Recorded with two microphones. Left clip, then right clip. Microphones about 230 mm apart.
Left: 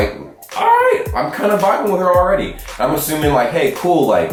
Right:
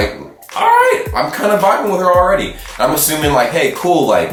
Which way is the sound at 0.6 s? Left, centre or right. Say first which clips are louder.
Right 2 dB; centre.